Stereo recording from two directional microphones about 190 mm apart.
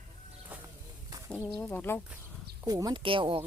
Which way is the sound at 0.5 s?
10° right (ahead or behind).